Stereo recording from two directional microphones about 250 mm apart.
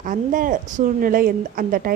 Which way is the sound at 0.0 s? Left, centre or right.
Right.